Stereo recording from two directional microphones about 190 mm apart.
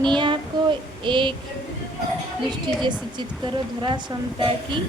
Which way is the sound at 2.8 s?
25° right (ahead or behind).